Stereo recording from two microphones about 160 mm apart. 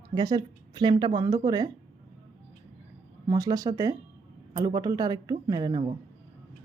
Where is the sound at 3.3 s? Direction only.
20° right (ahead or behind).